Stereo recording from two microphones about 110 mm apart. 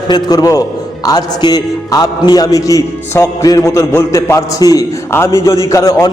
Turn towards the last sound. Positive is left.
turn(degrees=30)  # may be behind; listen again after turning